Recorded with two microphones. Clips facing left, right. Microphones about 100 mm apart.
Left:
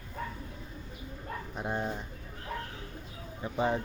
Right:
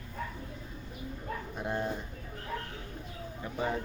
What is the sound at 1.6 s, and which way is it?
Speech, 20° left (ahead or behind).